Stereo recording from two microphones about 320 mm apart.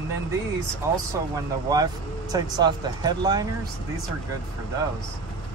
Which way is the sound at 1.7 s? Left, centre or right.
Centre.